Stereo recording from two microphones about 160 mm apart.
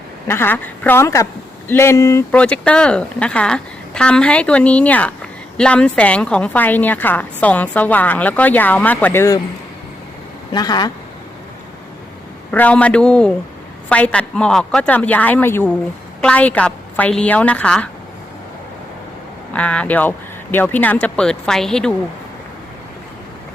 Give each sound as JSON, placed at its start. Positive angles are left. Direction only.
{"t": 0.3, "sound": "a woman's voice", "side_deg": 15}
{"t": 2.3, "sound": "a woman's voice", "side_deg": 10}
{"t": 10.5, "sound": "speech", "side_deg": 25}
{"t": 12.5, "sound": "a woman's voice", "side_deg": 10}
{"t": 19.5, "sound": "a woman's voice", "side_deg": 10}